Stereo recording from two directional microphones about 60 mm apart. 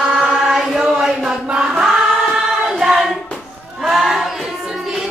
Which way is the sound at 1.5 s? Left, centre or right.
Centre.